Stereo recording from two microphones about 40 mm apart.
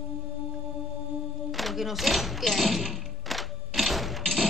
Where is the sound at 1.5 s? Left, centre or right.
Centre.